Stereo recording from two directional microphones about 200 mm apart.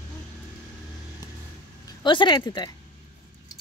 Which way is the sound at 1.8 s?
20° left (ahead or behind).